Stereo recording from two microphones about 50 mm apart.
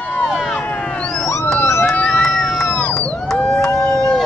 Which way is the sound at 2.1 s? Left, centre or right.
Centre.